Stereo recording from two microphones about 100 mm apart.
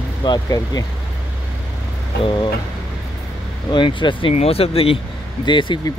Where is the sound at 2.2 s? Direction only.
50° left (ahead or behind).